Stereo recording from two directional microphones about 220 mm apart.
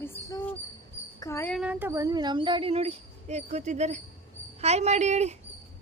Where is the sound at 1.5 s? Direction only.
5° right (ahead or behind); by 5.4 s 30° right (ahead or behind).